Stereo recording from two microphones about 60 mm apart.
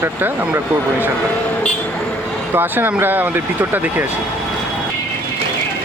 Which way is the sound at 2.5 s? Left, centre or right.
Right.